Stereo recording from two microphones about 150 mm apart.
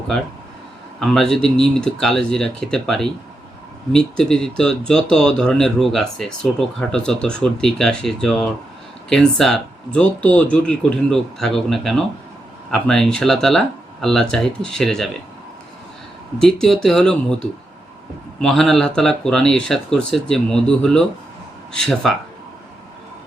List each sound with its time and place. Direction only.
0.9 s speech: centre (ahead or behind)
16.4 s speech: 5° left (ahead or behind)